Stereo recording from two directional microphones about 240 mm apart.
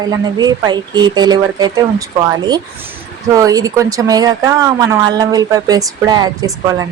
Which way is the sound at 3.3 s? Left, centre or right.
Centre.